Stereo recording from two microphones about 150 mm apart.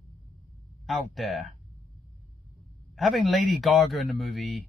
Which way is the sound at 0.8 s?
Centre (ahead or behind).